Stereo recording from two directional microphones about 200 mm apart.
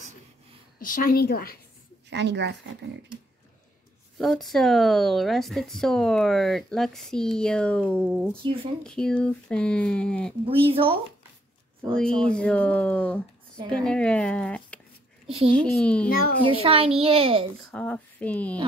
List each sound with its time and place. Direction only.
0.7 s a woman's voice: 45° left (ahead or behind)
2.0 s a woman's voice: 60° right (ahead or behind)
4.2 s speech: centre (ahead or behind)
10.4 s a woman's voice: 30° right (ahead or behind)
12.2 s speech: 5° left (ahead or behind)
15.2 s a child's voice: 30° right (ahead or behind)
15.5 s speech: 5° left (ahead or behind)
16.1 s a woman's voice: 45° left (ahead or behind)
16.4 s a woman's voice: 30° right (ahead or behind)
17.6 s speech: 5° left (ahead or behind)